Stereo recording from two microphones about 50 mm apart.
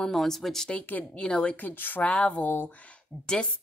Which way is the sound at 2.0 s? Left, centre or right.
Left.